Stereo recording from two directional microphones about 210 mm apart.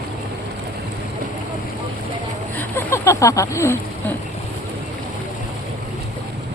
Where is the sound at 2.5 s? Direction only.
10° left (ahead or behind).